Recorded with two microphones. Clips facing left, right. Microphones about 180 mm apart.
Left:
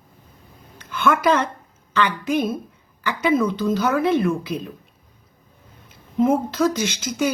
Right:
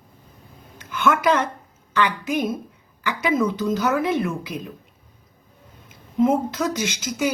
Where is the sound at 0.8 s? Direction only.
15° right (ahead or behind).